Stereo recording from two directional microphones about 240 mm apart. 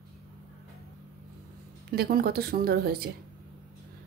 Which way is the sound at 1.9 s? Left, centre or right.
Right.